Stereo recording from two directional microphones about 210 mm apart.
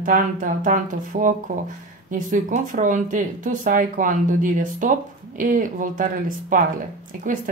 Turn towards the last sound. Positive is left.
turn(degrees=-40)  # may be behind; listen again after turning